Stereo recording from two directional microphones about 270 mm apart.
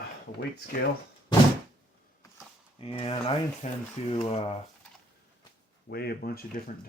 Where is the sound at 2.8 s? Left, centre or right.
Centre.